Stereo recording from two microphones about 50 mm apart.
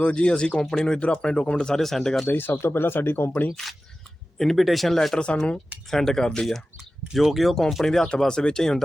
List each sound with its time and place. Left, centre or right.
0.0 s speech: left
0.6 s speech: centre
0.9 s speech: left; by 2.2 s centre
2.2 s speech: left
4.4 s speech: centre
5.2 s speech: left
5.9 s speech: centre
7.1 s speech: centre